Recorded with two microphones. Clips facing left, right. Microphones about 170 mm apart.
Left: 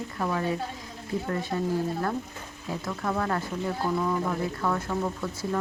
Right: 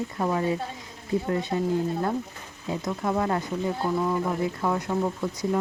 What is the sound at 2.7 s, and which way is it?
Speech, 20° right (ahead or behind).